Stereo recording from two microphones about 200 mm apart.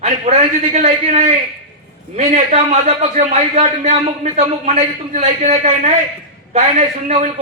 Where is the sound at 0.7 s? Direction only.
35° right (ahead or behind).